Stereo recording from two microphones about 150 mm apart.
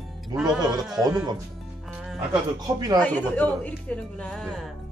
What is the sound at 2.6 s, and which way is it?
Speech, 25° right (ahead or behind).